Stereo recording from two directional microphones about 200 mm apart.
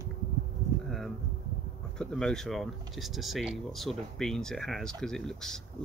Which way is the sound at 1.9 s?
5° left (ahead or behind).